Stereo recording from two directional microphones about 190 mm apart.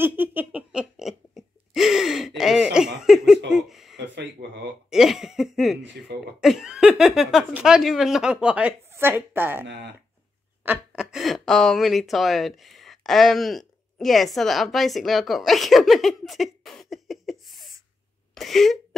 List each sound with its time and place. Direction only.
0.0 s a sound: 10° right (ahead or behind)
3.9 s a sound: 70° right (ahead or behind)
4.8 s cough: centre (ahead or behind)
6.4 s speech: 5° right (ahead or behind)
11.0 s speech: 5° right (ahead or behind)
18.3 s whimper: centre (ahead or behind)